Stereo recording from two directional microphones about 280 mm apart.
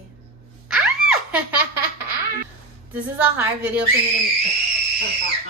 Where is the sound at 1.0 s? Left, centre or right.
Right.